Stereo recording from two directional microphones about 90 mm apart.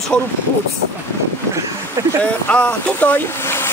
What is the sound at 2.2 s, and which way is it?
Speech, 15° left (ahead or behind).